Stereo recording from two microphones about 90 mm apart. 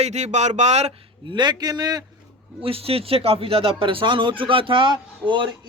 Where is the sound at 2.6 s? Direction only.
90° right.